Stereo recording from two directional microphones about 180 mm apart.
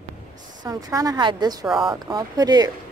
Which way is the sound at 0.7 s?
20° right (ahead or behind).